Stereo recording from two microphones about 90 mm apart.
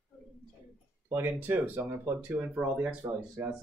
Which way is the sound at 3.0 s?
70° right (ahead or behind).